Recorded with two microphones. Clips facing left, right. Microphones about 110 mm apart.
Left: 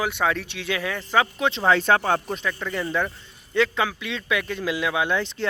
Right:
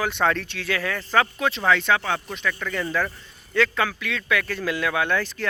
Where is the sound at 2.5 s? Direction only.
20° left (ahead or behind).